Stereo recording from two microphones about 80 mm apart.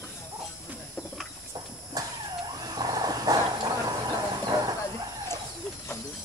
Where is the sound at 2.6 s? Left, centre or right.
Right.